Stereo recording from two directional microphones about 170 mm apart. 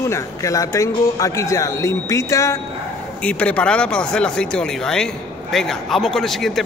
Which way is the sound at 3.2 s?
5° left (ahead or behind).